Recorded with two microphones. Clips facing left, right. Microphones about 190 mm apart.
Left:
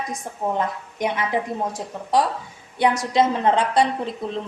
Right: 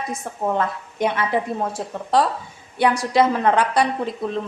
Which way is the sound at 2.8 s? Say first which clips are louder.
Right 1 dB; 20° left (ahead or behind).